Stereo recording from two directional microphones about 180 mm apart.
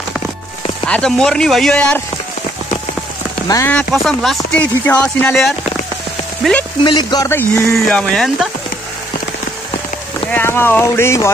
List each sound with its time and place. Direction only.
0.8 s speech: 5° left (ahead or behind)
3.4 s speech: 15° left (ahead or behind)
3.7 s speech: centre (ahead or behind)
6.8 s speech: 25° left (ahead or behind); by 8.5 s centre (ahead or behind)
10.3 s speech: 10° left (ahead or behind)